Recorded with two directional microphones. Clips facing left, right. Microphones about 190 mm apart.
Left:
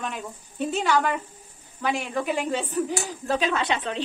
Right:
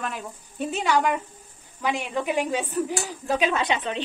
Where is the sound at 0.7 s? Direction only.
10° right (ahead or behind).